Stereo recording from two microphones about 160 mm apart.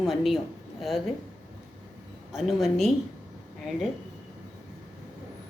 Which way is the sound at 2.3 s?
Centre (ahead or behind).